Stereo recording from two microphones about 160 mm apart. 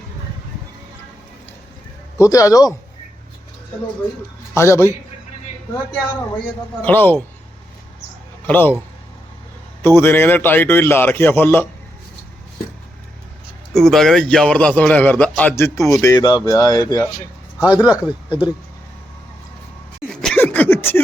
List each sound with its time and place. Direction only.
2.1 s speech: 20° left (ahead or behind)
4.5 s a man's voice: 15° left (ahead or behind)
6.8 s a man's voice: 10° left (ahead or behind)
8.4 s a man's voice: 10° left (ahead or behind)
9.8 s a man's voice: 15° left (ahead or behind)
13.7 s a man's voice: centre (ahead or behind); by 17.0 s 25° left (ahead or behind)
17.8 s speech: 5° right (ahead or behind)
20.2 s a sound: 10° left (ahead or behind)